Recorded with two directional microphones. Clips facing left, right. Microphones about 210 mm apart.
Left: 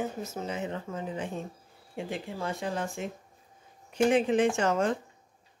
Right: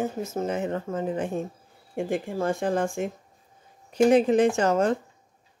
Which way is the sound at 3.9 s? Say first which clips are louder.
Right 5 dB; 40° right (ahead or behind).